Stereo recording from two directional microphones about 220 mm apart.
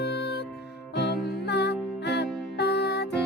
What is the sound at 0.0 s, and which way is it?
Music, 50° left (ahead or behind).